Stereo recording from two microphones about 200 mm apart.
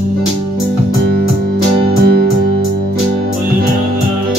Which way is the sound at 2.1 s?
50° right (ahead or behind).